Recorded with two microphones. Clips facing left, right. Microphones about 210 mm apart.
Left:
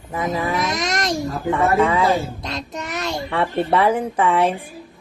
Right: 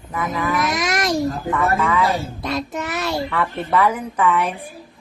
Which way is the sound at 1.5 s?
30° left (ahead or behind).